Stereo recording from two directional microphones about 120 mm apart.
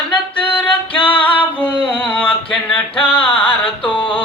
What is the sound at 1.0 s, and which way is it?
Singing, 45° left (ahead or behind).